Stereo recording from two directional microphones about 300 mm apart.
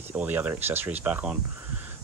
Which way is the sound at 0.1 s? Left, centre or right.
Centre.